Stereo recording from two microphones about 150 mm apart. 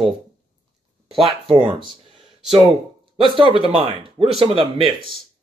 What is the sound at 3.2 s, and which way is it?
Speech, 30° right (ahead or behind).